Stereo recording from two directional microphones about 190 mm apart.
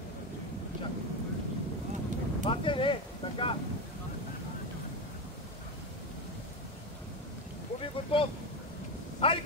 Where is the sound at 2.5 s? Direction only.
25° left (ahead or behind).